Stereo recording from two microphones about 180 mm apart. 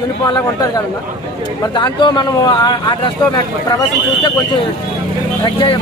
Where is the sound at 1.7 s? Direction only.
25° left (ahead or behind).